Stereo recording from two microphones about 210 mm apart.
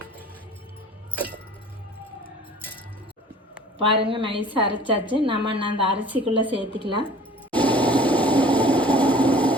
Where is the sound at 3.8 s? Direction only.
25° right (ahead or behind).